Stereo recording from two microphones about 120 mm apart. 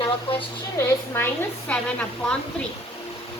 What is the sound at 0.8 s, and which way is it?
A woman's voice, 20° left (ahead or behind).